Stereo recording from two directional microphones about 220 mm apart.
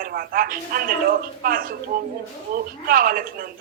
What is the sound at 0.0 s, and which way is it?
A woman's voice, 40° right (ahead or behind).